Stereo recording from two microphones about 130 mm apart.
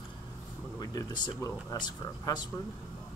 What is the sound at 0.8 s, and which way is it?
Speech, 30° left (ahead or behind).